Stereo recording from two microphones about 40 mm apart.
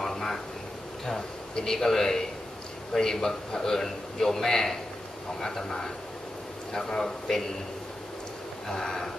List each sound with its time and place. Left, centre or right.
0.0 s a sound: centre
1.5 s a man's voice: centre
8.6 s a man's voice: centre